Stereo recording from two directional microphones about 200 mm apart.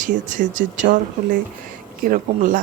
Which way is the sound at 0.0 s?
40° right (ahead or behind).